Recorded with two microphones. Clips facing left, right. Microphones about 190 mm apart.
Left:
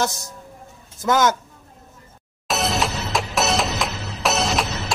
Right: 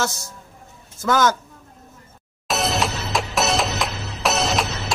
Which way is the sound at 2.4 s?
Centre (ahead or behind).